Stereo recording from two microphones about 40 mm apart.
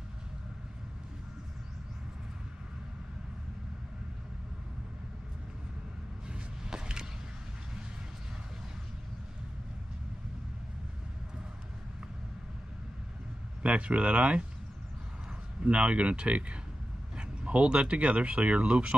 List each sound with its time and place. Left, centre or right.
6.2 s a sound: centre
13.6 s speech: right
15.6 s speech: right